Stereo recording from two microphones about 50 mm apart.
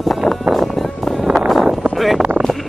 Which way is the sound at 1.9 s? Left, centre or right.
Centre.